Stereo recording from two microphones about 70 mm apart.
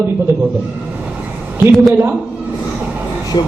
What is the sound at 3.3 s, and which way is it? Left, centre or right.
Speech, left.